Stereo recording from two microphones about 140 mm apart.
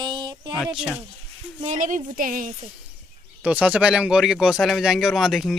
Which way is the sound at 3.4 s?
10° right (ahead or behind).